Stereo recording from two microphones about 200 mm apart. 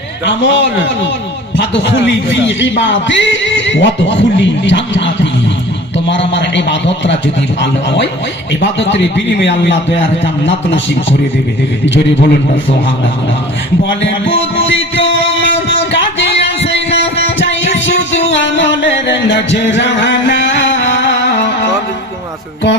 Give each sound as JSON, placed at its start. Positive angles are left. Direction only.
{"t": 0.3, "sound": "a man's voice", "side_deg": 65}
{"t": 8.8, "sound": "a man's voice", "side_deg": 65}
{"t": 14.0, "sound": "music", "side_deg": 70}
{"t": 15.9, "sound": "a sound", "side_deg": 65}
{"t": 18.3, "sound": "music", "side_deg": 65}